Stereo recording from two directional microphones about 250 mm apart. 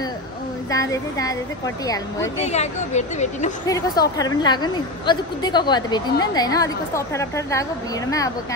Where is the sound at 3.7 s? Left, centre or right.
Centre.